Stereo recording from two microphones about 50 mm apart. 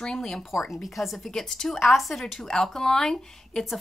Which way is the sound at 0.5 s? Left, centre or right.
Centre.